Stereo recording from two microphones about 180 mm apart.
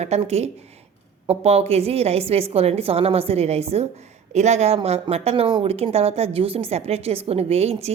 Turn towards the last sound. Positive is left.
turn(degrees=-35)  # may be behind; listen again after turning